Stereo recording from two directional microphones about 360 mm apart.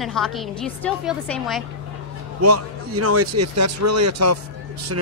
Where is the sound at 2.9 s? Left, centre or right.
Right.